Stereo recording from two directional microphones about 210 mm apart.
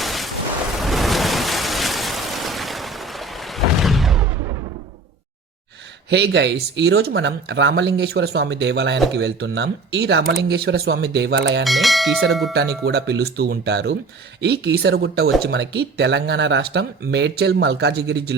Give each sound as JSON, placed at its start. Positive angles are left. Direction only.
{"t": 0.0, "sound": "a sound", "side_deg": 0}
{"t": 0.8, "sound": "waves", "side_deg": 0}
{"t": 6.1, "sound": "speech", "side_deg": -55}
{"t": 11.6, "sound": "speech", "side_deg": 0}
{"t": 12.5, "sound": "speech", "side_deg": -50}